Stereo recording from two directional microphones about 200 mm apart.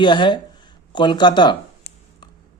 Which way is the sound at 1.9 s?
55° left (ahead or behind).